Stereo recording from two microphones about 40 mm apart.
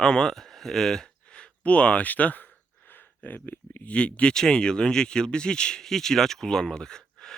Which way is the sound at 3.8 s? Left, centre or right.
Left.